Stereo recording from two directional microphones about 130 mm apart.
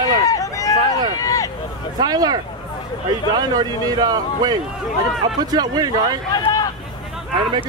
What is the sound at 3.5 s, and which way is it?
Speech, 30° right (ahead or behind).